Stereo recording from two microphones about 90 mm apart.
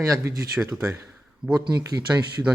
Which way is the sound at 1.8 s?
40° right (ahead or behind).